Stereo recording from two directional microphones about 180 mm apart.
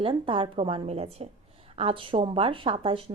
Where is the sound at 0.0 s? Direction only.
30° right (ahead or behind).